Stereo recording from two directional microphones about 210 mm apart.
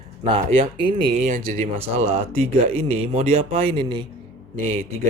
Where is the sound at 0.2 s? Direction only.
25° right (ahead or behind).